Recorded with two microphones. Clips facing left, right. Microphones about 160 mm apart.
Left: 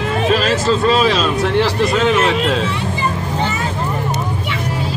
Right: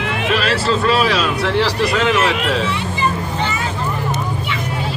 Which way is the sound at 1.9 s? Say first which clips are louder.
Left 2 dB; 35° left (ahead or behind).